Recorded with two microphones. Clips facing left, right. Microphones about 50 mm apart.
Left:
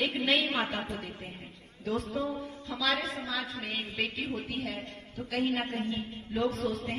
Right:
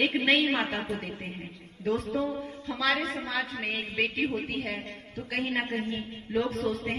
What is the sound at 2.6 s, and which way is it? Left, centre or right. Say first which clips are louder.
A woman's voice: right 3 dB; right.